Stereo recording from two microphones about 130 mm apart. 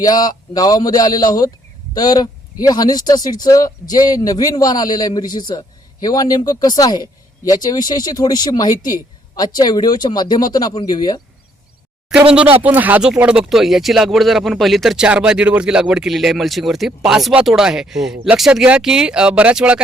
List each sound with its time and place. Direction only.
0.0 s speech: 30° left (ahead or behind)
12.1 s speech: 5° right (ahead or behind)